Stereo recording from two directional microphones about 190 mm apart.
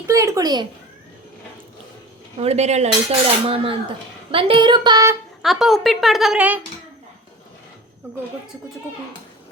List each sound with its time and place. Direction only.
0.1 s cutlery: 15° right (ahead or behind)
2.4 s cutlery: 35° right (ahead or behind)
5.4 s a woman's voice: centre (ahead or behind)